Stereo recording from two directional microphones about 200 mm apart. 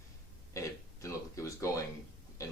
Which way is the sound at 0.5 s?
15° left (ahead or behind).